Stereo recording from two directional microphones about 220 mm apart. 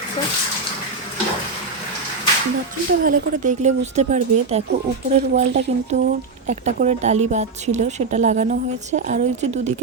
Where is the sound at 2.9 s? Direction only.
40° right (ahead or behind).